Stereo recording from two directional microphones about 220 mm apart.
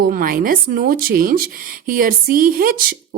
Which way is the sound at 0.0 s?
40° right (ahead or behind).